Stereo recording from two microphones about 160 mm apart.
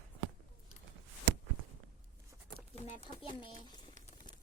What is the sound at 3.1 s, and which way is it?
Speech, 30° left (ahead or behind).